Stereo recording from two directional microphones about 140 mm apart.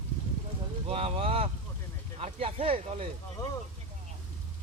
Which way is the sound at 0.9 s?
45° right (ahead or behind).